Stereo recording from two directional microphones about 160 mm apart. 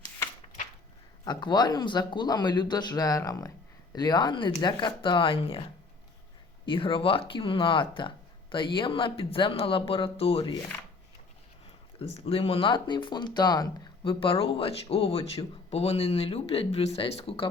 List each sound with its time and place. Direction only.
1.2 s speech: 25° left (ahead or behind)
6.7 s speech: 35° left (ahead or behind)
11.9 s speech: 40° left (ahead or behind)